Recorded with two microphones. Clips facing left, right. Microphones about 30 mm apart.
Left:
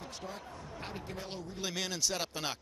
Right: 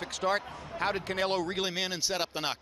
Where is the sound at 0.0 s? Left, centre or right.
Right.